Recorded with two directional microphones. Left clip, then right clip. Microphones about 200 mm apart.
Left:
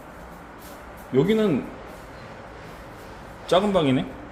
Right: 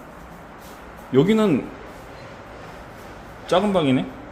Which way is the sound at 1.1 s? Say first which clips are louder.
Right 3 dB; 25° right (ahead or behind).